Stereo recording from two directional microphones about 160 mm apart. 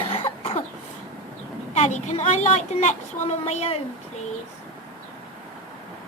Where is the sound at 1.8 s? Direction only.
45° left (ahead or behind).